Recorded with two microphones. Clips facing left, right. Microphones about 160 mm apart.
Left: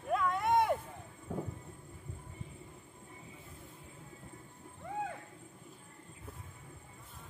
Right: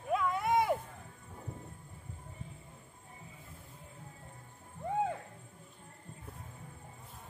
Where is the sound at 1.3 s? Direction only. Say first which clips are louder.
Left 14 dB; 80° left.